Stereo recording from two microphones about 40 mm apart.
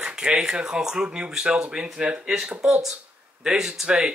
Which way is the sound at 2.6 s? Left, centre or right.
Centre.